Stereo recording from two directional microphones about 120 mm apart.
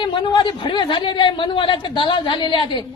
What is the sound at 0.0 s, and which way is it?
Speech, 45° left (ahead or behind).